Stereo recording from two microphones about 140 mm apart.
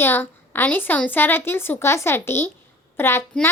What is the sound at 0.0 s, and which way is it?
A child's voice, 15° left (ahead or behind).